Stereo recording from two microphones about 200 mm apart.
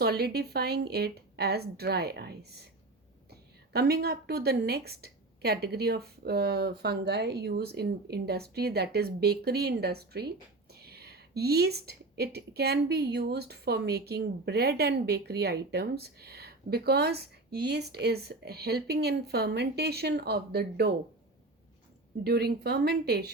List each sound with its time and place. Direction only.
0.0 s a woman's voice: 50° right (ahead or behind)
22.2 s a woman's voice: 50° right (ahead or behind)